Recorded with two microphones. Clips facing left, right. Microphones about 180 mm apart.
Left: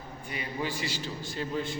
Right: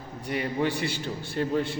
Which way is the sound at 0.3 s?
65° right (ahead or behind).